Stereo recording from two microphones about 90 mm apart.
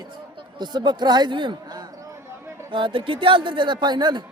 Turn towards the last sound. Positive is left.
turn(degrees=-55)  # may be behind; listen again after turning